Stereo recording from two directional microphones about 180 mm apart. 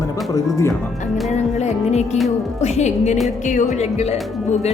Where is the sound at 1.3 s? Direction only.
40° left (ahead or behind).